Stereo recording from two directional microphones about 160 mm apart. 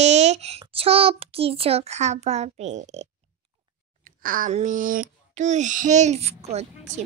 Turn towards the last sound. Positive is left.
turn(degrees=-45)  # may be behind; listen again after turning